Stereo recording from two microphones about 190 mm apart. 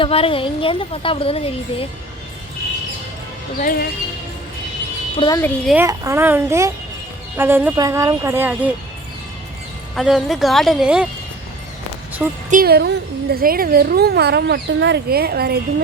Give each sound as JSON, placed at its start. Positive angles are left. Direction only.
{"t": 0.0, "sound": "a woman's voice", "side_deg": 30}
{"t": 3.6, "sound": "speech", "side_deg": 50}
{"t": 5.1, "sound": "a woman's voice", "side_deg": 25}
{"t": 5.6, "sound": "speech", "side_deg": -10}
{"t": 9.9, "sound": "a woman's voice", "side_deg": 0}
{"t": 12.5, "sound": "a woman's voice", "side_deg": -50}